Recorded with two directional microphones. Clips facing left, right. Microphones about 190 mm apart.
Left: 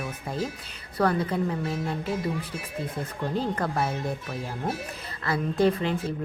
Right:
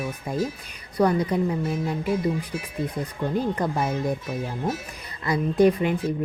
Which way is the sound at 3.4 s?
15° right (ahead or behind).